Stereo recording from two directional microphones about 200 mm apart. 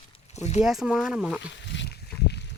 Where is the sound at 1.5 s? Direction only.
60° left (ahead or behind).